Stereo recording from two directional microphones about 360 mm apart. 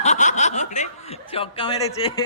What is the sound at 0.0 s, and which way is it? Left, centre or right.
Speech, centre.